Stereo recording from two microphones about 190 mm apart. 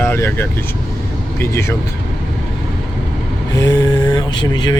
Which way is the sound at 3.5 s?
20° left (ahead or behind).